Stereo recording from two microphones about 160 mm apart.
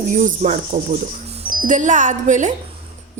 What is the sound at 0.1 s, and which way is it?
A woman's voice, 50° right (ahead or behind).